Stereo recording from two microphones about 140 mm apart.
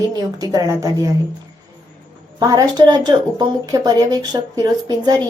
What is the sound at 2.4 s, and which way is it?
Speech, 25° right (ahead or behind).